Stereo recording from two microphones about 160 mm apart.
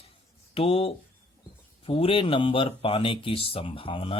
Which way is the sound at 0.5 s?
35° left (ahead or behind).